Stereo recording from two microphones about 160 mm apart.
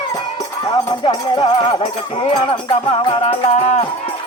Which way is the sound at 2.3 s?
35° left (ahead or behind).